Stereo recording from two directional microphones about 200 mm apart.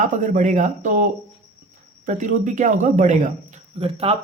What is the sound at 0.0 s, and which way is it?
Speech, 40° right (ahead or behind).